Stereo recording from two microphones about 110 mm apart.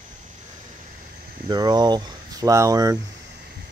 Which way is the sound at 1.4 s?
40° right (ahead or behind).